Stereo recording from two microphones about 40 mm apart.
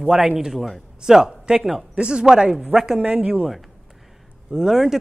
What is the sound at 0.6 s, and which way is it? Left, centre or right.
Speech, centre.